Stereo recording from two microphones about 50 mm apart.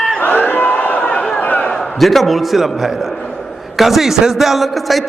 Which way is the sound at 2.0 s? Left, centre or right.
Centre.